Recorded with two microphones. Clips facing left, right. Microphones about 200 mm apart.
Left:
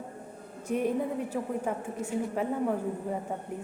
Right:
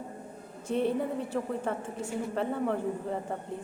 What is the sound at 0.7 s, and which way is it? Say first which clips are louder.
A woman's voice: even; 10° left (ahead or behind).